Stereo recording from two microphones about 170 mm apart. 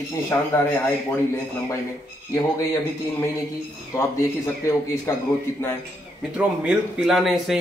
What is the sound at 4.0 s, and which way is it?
A man's voice, 15° left (ahead or behind).